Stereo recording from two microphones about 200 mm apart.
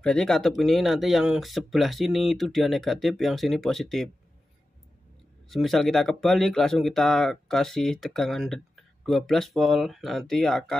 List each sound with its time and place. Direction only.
0.0 s speech: 5° left (ahead or behind)
5.5 s speech: centre (ahead or behind)